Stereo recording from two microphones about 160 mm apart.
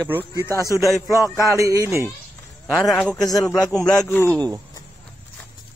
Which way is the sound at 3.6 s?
20° left (ahead or behind).